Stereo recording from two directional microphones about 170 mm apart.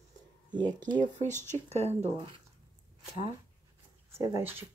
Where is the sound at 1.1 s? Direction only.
45° right (ahead or behind).